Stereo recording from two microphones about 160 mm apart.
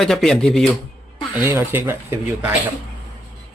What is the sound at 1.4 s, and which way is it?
Speech, 10° right (ahead or behind).